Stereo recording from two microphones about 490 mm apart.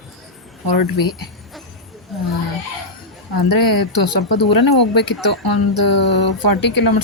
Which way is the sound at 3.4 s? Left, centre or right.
Left.